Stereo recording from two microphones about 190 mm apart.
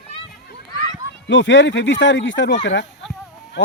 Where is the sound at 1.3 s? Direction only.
75° left (ahead or behind).